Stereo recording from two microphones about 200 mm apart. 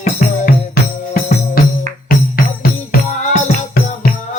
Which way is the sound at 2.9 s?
45° left (ahead or behind).